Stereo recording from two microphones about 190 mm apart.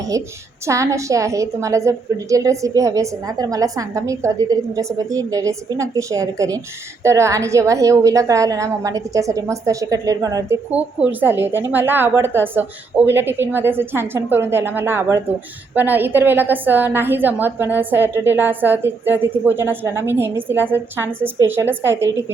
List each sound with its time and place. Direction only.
0.1 s a woman's voice: 15° right (ahead or behind)
10.7 s a woman's voice: 10° right (ahead or behind)